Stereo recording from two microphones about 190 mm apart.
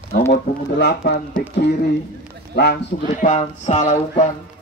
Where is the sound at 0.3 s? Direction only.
60° left (ahead or behind).